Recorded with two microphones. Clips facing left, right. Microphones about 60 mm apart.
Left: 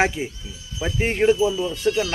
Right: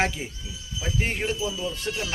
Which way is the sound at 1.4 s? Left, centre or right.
Left.